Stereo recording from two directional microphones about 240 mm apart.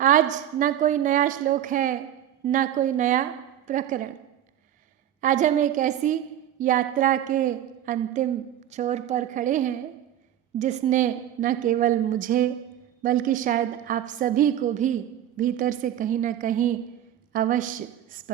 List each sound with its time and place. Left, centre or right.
0.0 s a woman's voice: right
5.2 s a woman's voice: right